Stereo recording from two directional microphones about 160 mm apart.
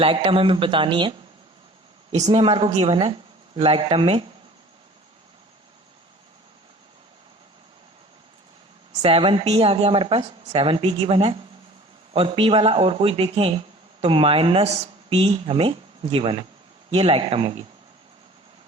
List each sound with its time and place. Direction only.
0.0 s a woman's voice: 35° right (ahead or behind)
2.1 s a woman's voice: 45° right (ahead or behind)
2.4 s a woman's voice: 30° right (ahead or behind)
8.9 s a woman's voice: 35° right (ahead or behind)